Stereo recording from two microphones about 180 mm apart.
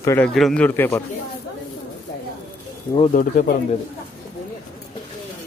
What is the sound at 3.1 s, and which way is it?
Speech, 50° left (ahead or behind).